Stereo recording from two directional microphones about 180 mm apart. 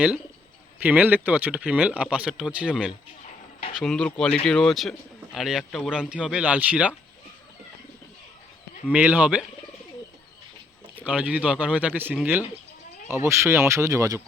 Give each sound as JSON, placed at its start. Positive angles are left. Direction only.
{"t": 0.8, "sound": "speech", "side_deg": -10}
{"t": 8.9, "sound": "speech", "side_deg": -5}
{"t": 10.9, "sound": "speech", "side_deg": -10}